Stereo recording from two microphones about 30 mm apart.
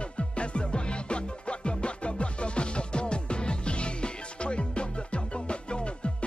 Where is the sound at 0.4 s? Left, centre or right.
Left.